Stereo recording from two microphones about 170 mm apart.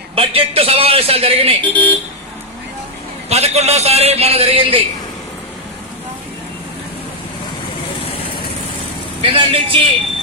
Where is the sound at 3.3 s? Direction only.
40° right (ahead or behind).